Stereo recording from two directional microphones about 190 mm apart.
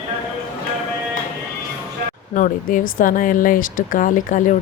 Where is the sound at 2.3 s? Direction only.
45° left (ahead or behind).